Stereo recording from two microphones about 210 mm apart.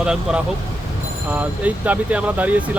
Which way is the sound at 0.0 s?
5° right (ahead or behind).